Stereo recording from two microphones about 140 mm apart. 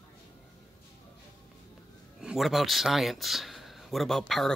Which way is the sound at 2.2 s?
Centre (ahead or behind).